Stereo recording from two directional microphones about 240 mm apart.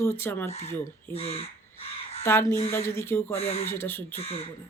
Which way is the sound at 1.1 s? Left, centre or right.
Left.